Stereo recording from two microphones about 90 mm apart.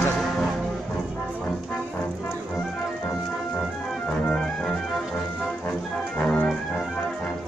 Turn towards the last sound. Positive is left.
turn(degrees=15)  # may be behind; listen again after turning